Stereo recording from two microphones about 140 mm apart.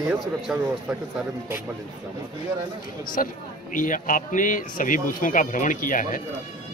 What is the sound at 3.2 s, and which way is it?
Speech, 75° left (ahead or behind).